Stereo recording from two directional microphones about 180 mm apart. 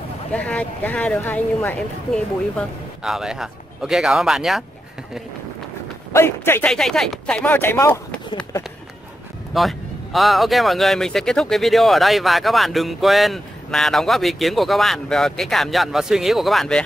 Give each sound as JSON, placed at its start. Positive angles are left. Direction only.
{"t": 0.3, "sound": "speech", "side_deg": 5}
{"t": 6.1, "sound": "speech", "side_deg": 10}
{"t": 6.7, "sound": "speech", "side_deg": 0}
{"t": 9.5, "sound": "speech", "side_deg": 0}